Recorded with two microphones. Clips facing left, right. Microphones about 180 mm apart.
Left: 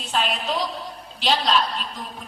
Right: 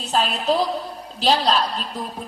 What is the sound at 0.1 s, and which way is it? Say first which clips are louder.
A woman's voice: right 4 dB; 40° right (ahead or behind).